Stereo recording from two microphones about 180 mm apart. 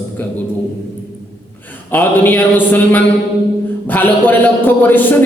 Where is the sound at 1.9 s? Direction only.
10° left (ahead or behind).